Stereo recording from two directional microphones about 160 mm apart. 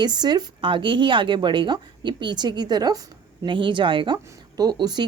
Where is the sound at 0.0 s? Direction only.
25° right (ahead or behind).